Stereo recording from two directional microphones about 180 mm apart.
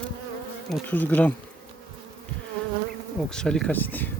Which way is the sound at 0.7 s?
10° left (ahead or behind).